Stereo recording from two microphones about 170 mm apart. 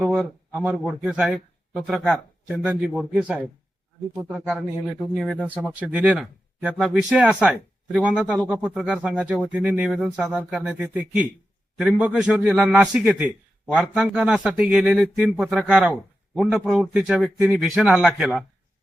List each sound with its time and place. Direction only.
0.0 s speech: 5° right (ahead or behind)
4.4 s speech: 5° right (ahead or behind)